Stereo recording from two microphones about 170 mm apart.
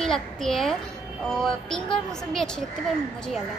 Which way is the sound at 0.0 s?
Centre (ahead or behind).